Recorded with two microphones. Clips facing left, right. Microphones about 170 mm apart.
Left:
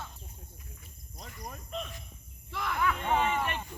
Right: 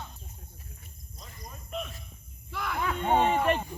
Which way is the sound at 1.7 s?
5° right (ahead or behind).